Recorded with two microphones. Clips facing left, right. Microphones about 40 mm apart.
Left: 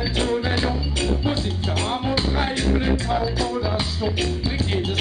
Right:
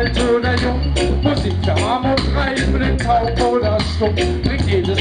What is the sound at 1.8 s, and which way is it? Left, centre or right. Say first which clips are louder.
Music: right 8 dB; right.